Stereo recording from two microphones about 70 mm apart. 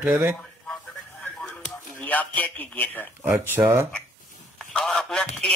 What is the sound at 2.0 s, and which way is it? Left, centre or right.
Speech, left.